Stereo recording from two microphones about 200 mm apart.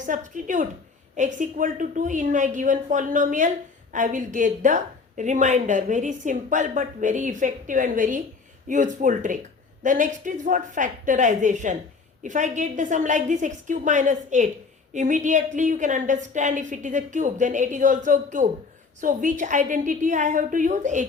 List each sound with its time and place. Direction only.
0.0 s a woman's voice: 40° right (ahead or behind)